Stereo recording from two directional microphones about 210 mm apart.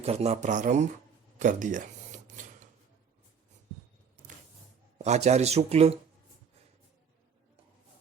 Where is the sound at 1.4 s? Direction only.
35° right (ahead or behind).